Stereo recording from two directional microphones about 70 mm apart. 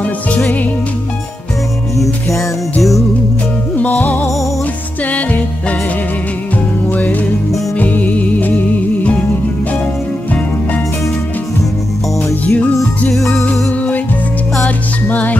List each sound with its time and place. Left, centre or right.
0.0 s music: left
2.0 s music: centre
3.7 s music: left
6.9 s music: left
12.4 s music: left
13.1 s music: centre
13.5 s music: centre